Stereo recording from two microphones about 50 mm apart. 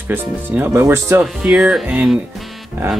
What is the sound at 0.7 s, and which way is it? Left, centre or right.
Speech, right.